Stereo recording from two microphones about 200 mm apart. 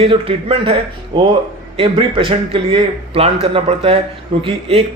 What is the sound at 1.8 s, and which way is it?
A man's voice, 25° right (ahead or behind).